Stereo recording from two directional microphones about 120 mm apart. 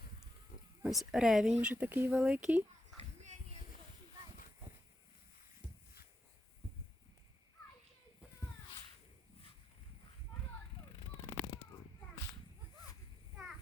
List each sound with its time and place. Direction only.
0.9 s speech: centre (ahead or behind)
1.7 s speech: 15° right (ahead or behind)
3.0 s a sound: 70° right (ahead or behind)